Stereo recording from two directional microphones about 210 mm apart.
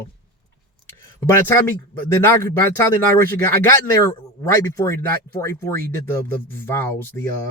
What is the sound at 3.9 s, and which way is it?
Speech, 15° left (ahead or behind).